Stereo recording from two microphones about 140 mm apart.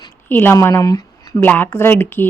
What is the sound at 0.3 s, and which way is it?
A woman's voice, 15° left (ahead or behind).